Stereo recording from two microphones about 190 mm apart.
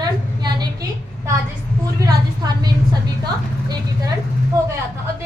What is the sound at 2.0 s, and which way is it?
Speech, 20° right (ahead or behind).